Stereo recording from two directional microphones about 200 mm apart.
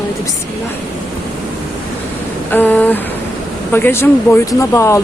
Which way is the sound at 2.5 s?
10° left (ahead or behind).